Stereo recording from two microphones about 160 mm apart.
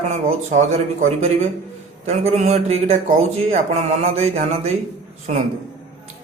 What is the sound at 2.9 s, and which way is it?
Speech, 50° right (ahead or behind).